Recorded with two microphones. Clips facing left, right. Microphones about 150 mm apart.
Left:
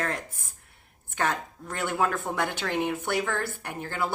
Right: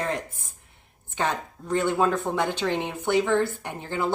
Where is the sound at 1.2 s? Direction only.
20° right (ahead or behind).